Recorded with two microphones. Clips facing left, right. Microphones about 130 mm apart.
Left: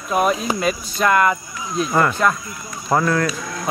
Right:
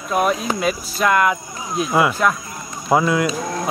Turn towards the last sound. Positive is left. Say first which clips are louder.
# right 4 dB
turn(degrees=-35)  # may be behind; listen again after turning